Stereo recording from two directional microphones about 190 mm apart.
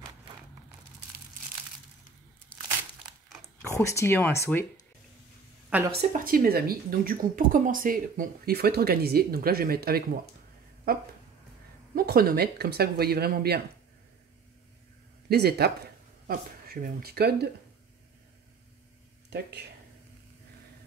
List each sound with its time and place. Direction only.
3.4 s speech: 15° left (ahead or behind)
5.7 s a woman's voice: 10° right (ahead or behind)
6.1 s speech: 50° right (ahead or behind)
11.9 s speech: 50° right (ahead or behind)
15.2 s speech: 55° right (ahead or behind)